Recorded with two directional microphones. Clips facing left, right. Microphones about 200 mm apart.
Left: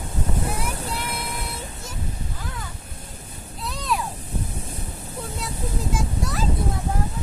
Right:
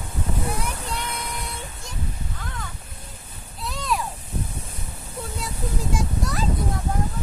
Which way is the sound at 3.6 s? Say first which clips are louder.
Even; centre (ahead or behind).